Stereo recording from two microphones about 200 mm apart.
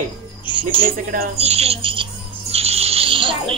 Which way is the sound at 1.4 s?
30° right (ahead or behind).